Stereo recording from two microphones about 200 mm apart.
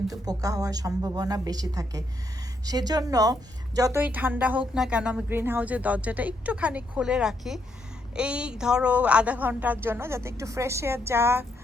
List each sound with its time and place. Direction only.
0.1 s a woman's voice: 15° right (ahead or behind)